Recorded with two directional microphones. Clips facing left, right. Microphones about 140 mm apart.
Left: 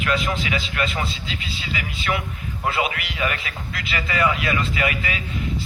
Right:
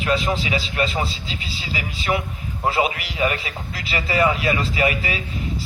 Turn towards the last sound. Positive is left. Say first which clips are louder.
# right 3 dB
turn(degrees=-30)  # may be behind; listen again after turning